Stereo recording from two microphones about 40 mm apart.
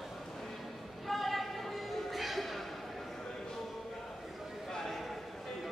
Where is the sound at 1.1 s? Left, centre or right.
Centre.